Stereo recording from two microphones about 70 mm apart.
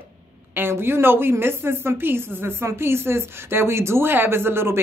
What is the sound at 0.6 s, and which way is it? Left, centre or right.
Speech, right.